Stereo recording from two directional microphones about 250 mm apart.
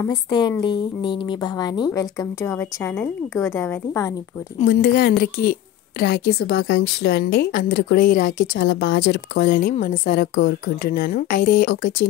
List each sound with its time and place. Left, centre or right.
0.0 s a woman's voice: centre
4.6 s a woman's voice: left